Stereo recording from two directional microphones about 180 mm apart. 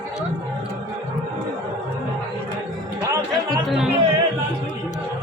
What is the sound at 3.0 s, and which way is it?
Music, 20° right (ahead or behind).